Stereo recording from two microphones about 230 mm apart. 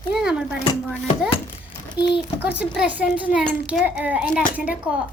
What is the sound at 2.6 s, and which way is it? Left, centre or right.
A child's voice, centre.